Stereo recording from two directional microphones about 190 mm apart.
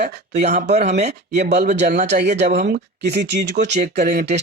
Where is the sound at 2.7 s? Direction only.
60° right (ahead or behind).